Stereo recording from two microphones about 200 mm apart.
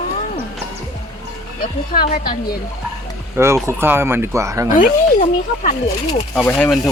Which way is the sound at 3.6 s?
10° right (ahead or behind).